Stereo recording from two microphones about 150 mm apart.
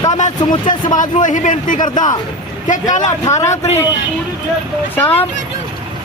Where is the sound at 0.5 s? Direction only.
30° left (ahead or behind).